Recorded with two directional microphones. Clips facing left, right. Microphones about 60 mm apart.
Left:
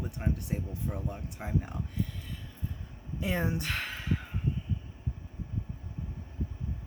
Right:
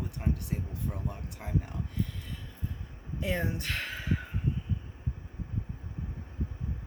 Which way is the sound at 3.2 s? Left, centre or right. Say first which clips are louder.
Left 1 dB; centre.